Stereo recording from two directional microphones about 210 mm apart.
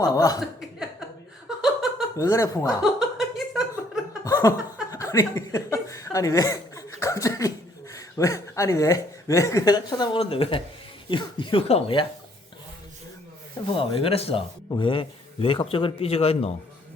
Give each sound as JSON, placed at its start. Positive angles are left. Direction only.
{"t": 0.0, "sound": "chuckle", "side_deg": 15}
{"t": 0.3, "sound": "chuckle", "side_deg": -5}
{"t": 1.5, "sound": "laughter", "side_deg": 0}
{"t": 2.1, "sound": "speech", "side_deg": 15}
{"t": 2.8, "sound": "a sound", "side_deg": 0}
{"t": 4.2, "sound": "laughter", "side_deg": 15}
{"t": 4.9, "sound": "chuckle", "side_deg": 15}
{"t": 7.9, "sound": "speech", "side_deg": 15}
{"t": 13.7, "sound": "speech", "side_deg": 25}